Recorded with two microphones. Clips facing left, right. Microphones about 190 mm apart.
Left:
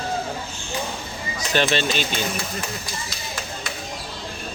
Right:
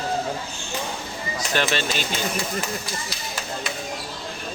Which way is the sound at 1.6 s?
30° left (ahead or behind).